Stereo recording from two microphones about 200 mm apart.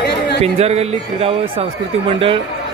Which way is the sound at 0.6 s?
30° right (ahead or behind).